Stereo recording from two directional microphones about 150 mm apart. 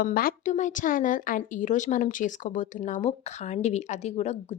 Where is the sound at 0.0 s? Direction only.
75° left (ahead or behind).